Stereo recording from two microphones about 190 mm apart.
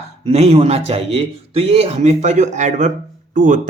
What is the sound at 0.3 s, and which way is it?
A man's voice, 35° right (ahead or behind).